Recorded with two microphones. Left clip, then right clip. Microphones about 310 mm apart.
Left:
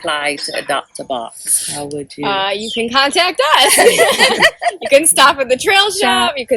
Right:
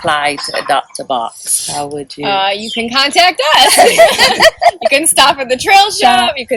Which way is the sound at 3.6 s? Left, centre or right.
Centre.